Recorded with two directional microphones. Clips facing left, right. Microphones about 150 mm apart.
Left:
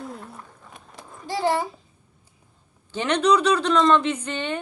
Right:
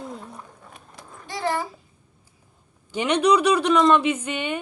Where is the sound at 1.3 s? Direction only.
30° left (ahead or behind).